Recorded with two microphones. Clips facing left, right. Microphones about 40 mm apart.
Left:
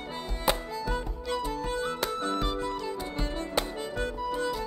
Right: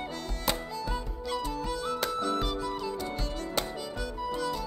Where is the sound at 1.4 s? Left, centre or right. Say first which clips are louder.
Left 3 dB; centre.